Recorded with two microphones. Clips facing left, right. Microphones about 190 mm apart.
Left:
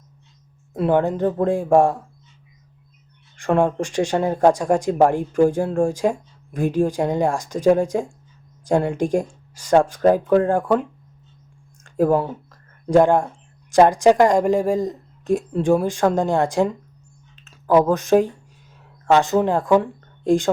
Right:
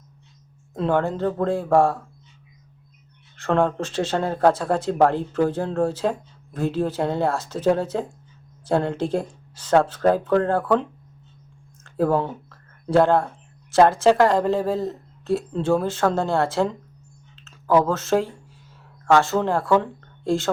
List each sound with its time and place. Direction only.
0.7 s speech: 15° left (ahead or behind)
3.3 s speech: 15° left (ahead or behind)
11.8 s a sound: 15° left (ahead or behind)
12.9 s speech: 15° left (ahead or behind)